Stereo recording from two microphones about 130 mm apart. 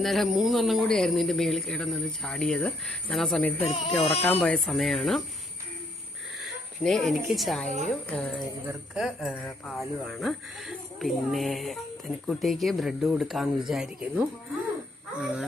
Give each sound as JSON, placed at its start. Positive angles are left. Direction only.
{"t": 0.0, "sound": "speech", "side_deg": 0}
{"t": 3.6, "sound": "speech", "side_deg": 45}
{"t": 4.4, "sound": "speech", "side_deg": 10}
{"t": 6.4, "sound": "speech", "side_deg": 5}
{"t": 9.0, "sound": "speech", "side_deg": -5}
{"t": 9.3, "sound": "speech", "side_deg": 10}
{"t": 9.7, "sound": "speech", "side_deg": 0}